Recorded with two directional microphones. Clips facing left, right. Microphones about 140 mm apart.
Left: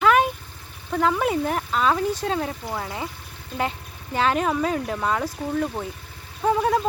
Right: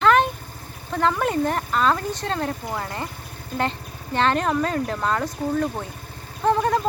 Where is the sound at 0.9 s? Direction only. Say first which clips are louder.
Even; 5° left (ahead or behind).